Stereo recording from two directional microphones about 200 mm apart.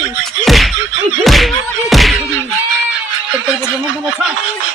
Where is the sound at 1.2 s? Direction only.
Centre (ahead or behind).